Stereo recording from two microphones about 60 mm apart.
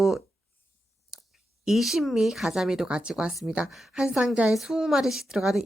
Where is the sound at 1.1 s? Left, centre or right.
Centre.